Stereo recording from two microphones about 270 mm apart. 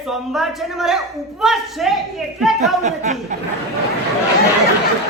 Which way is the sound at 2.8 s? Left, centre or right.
Right.